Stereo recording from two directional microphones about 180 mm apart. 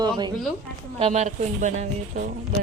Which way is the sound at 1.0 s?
40° right (ahead or behind).